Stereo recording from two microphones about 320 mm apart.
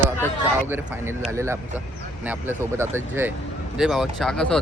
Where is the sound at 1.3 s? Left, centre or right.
Centre.